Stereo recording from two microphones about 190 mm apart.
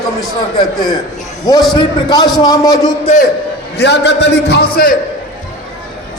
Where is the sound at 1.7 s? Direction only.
20° left (ahead or behind).